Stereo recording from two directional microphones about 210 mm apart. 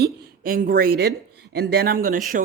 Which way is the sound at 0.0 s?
45° right (ahead or behind).